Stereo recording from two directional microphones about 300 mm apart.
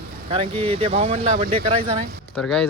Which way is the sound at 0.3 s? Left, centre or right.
Centre.